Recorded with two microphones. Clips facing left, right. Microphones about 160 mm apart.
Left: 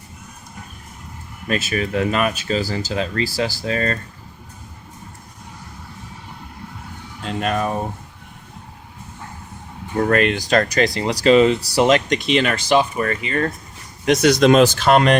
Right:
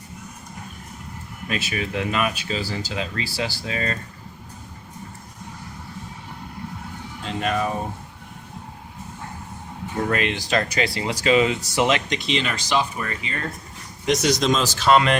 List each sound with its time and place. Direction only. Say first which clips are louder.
1.5 s speech: left 5 dB; 45° left (ahead or behind)
7.3 s music: left 2 dB; 45° left (ahead or behind)
10.0 s speech: left 6 dB; 50° left (ahead or behind)